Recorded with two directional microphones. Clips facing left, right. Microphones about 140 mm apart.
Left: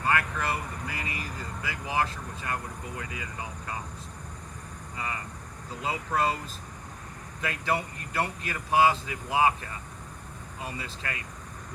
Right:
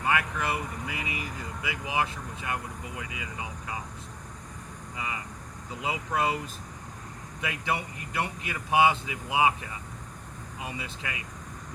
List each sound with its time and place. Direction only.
0.0 s speech: 15° right (ahead or behind)
4.9 s speech: 15° right (ahead or behind)
7.4 s speech: 15° right (ahead or behind)